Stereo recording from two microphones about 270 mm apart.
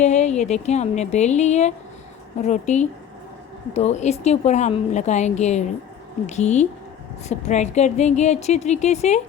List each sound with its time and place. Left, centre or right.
0.0 s a woman's voice: left